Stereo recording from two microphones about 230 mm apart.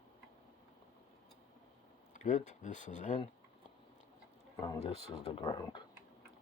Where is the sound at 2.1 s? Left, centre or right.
Left.